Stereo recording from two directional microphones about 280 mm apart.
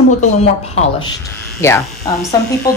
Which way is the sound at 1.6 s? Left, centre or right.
Centre.